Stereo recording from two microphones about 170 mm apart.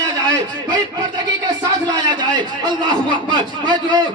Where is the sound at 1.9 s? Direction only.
25° right (ahead or behind).